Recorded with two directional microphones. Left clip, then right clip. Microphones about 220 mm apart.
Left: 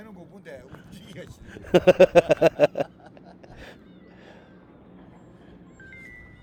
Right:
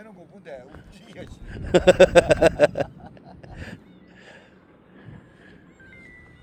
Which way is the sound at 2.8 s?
55° left (ahead or behind).